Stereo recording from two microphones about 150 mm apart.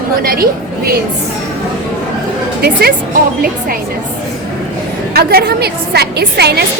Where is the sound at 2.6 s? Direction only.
90° right.